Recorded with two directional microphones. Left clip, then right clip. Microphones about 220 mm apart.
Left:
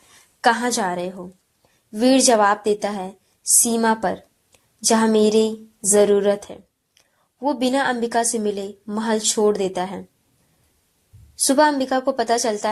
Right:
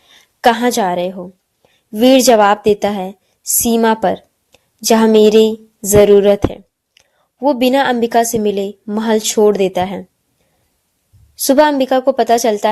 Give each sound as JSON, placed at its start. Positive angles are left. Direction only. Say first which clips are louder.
{"t": 0.1, "sound": "a sound", "louder": "right 6 dB", "side_deg": -50}
{"t": 2.1, "sound": "a woman's voice", "louder": "right 6 dB", "side_deg": -50}
{"t": 11.3, "sound": "a woman's voice", "louder": "right 6 dB", "side_deg": -55}